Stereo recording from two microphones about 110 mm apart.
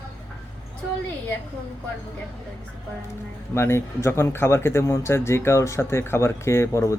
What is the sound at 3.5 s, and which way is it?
Speech, 25° left (ahead or behind).